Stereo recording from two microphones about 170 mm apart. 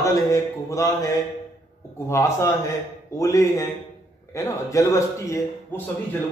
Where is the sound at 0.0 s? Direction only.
20° left (ahead or behind).